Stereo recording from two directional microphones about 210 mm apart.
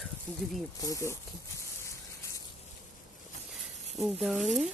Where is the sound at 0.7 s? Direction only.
15° left (ahead or behind).